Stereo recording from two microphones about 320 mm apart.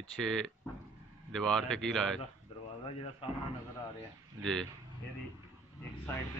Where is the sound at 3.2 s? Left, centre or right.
Centre.